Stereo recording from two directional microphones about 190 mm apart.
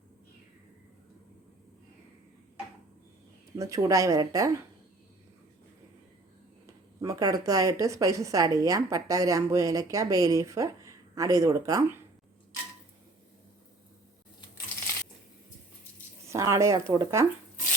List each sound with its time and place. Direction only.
3.5 s speech: 20° right (ahead or behind)
7.0 s speech: 20° right (ahead or behind)
16.3 s speech: 15° right (ahead or behind)